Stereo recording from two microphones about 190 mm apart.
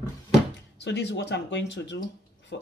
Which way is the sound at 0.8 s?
65° left (ahead or behind).